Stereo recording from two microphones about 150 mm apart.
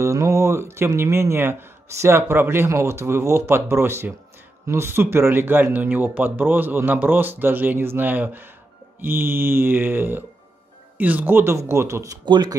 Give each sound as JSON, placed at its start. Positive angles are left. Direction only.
{"t": 0.0, "sound": "speech", "side_deg": -20}